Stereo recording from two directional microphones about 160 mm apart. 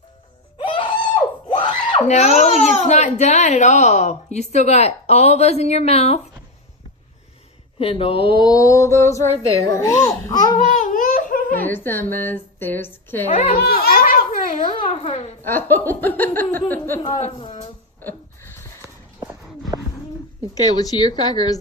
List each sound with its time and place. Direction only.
0.6 s screaming: 35° left (ahead or behind)
2.0 s a child's voice: 45° left (ahead or behind)
7.8 s speech: 35° left (ahead or behind)
8.4 s a child's voice: 25° left (ahead or behind)
10.7 s laughter: 55° left (ahead or behind)
11.6 s a woman's voice: 15° left (ahead or behind)
13.5 s a sound: 70° left (ahead or behind)
14.6 s a child's voice: 35° left (ahead or behind)
15.4 s speech: 15° left (ahead or behind)
17.2 s a child's voice: 40° left (ahead or behind)
20.6 s a child's voice: 25° left (ahead or behind)